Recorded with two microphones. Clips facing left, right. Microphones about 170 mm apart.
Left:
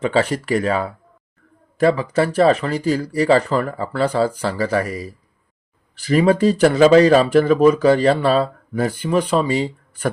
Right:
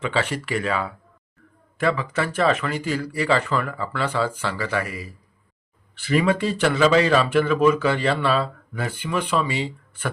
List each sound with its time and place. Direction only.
0.0 s speech: 40° left (ahead or behind)